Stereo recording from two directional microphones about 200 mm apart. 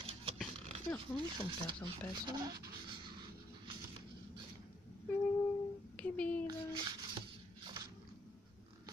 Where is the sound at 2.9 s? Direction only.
25° right (ahead or behind).